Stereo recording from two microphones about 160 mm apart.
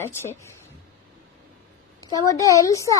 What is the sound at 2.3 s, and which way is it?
Speech, 20° left (ahead or behind).